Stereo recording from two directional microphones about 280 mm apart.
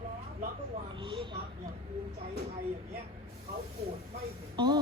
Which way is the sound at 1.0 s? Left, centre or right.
Centre.